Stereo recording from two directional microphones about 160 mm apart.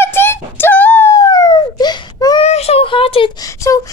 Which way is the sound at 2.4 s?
40° left (ahead or behind).